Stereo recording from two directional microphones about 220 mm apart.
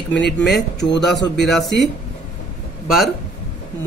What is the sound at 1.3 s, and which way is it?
Speech, centre (ahead or behind).